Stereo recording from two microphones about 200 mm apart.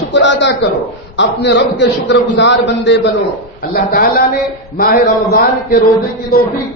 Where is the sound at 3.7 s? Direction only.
45° left (ahead or behind).